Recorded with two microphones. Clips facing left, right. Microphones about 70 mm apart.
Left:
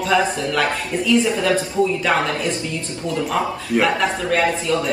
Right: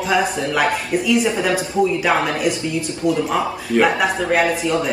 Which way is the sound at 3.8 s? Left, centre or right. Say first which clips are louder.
Right 2 dB; centre.